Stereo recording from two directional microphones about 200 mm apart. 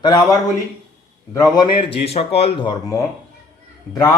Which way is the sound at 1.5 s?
25° left (ahead or behind).